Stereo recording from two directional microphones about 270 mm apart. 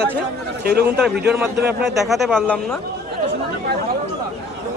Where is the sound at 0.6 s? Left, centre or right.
Right.